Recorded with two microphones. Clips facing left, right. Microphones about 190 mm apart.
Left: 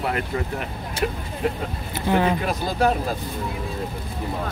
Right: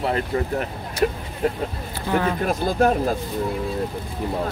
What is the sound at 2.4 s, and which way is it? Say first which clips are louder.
Speech: right 2 dB; 50° right (ahead or behind).